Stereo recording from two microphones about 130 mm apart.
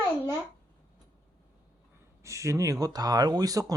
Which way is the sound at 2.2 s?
25° right (ahead or behind).